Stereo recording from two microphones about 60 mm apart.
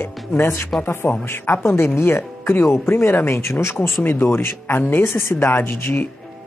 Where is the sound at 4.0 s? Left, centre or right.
Left.